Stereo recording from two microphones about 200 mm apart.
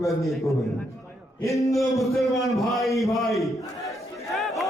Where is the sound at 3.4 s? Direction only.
Centre (ahead or behind).